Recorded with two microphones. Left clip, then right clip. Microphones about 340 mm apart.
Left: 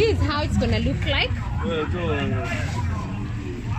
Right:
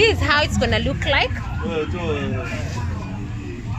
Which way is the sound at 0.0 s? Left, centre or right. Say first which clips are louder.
Right 6 dB; right.